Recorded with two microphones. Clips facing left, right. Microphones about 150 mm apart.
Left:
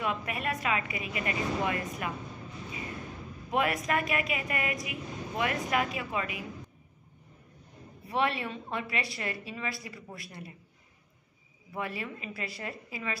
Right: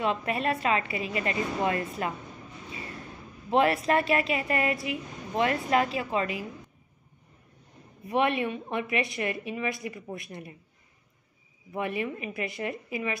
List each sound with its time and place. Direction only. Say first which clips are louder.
0.0 s a woman's voice: right 5 dB; 30° right (ahead or behind)
3.4 s a woman's voice: right 6 dB; 30° right (ahead or behind)
8.1 s a woman's voice: right 4 dB; 20° right (ahead or behind)
11.7 s a woman's voice: right 6 dB; 20° right (ahead or behind)